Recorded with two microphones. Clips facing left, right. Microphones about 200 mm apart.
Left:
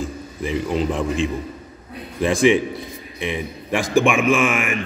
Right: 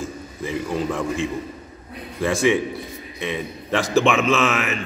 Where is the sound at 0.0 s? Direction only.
15° left (ahead or behind).